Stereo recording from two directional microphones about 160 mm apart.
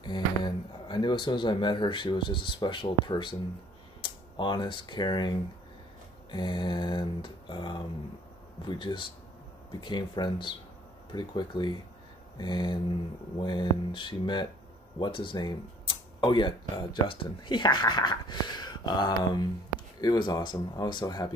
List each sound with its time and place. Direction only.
0.0 s speech: 30° left (ahead or behind)
6.3 s speech: 30° left (ahead or behind)